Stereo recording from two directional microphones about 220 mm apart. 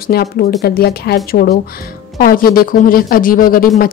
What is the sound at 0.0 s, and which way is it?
A woman's voice, 45° left (ahead or behind).